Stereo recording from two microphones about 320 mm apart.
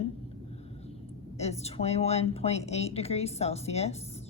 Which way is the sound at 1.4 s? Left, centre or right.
Centre.